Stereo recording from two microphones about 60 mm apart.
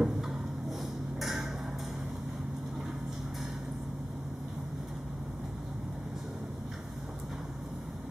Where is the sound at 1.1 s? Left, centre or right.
Centre.